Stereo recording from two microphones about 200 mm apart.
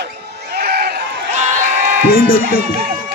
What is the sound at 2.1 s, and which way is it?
Speech, 45° left (ahead or behind).